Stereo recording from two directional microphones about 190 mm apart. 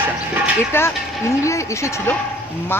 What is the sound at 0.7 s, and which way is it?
A woman's voice, 10° left (ahead or behind).